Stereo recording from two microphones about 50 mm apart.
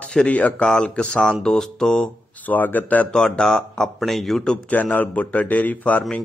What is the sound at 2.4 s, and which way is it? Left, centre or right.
Speech, left.